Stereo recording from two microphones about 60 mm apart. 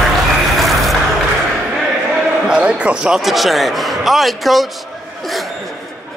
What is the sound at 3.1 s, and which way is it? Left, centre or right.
A man's voice, centre.